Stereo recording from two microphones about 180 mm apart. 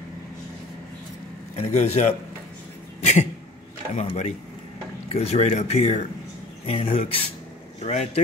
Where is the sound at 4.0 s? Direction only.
35° left (ahead or behind).